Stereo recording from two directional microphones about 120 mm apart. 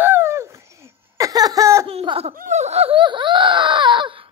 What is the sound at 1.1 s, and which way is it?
Laughter, 30° right (ahead or behind).